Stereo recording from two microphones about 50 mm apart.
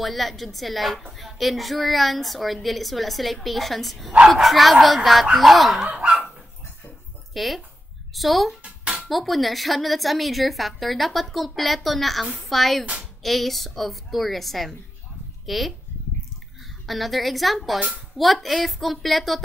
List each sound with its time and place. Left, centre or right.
0.0 s a woman's voice: centre
5.9 s dog: right
7.3 s a woman's voice: centre
8.6 s music: right
9.0 s a woman's voice: centre
16.8 s a woman's voice: centre